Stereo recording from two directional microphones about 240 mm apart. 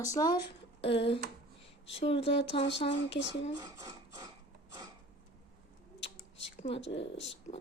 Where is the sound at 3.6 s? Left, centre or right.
Centre.